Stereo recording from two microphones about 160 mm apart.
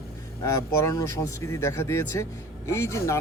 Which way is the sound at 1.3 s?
20° left (ahead or behind).